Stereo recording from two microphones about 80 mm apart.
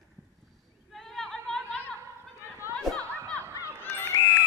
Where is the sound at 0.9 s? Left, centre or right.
Centre.